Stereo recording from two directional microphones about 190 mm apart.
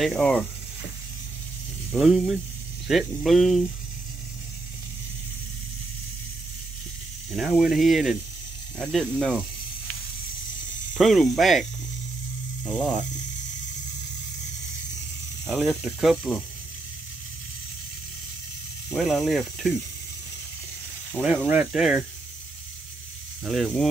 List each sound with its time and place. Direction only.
0.0 s speech: 5° left (ahead or behind)
1.9 s speech: centre (ahead or behind)
7.3 s speech: centre (ahead or behind)
11.0 s speech: centre (ahead or behind)
15.4 s speech: centre (ahead or behind)
18.9 s speech: centre (ahead or behind)
21.1 s speech: 5° right (ahead or behind)
23.4 s speech: centre (ahead or behind)